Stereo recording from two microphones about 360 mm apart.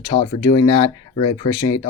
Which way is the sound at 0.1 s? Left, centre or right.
Centre.